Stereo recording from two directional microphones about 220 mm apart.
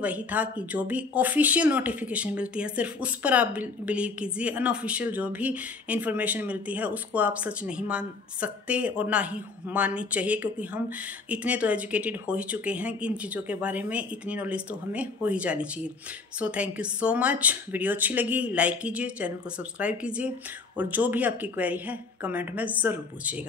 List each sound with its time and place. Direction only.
0.0 s speech: 5° right (ahead or behind)